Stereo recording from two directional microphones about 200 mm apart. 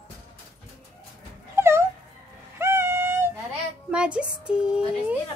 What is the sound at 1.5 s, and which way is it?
Dog, 10° right (ahead or behind).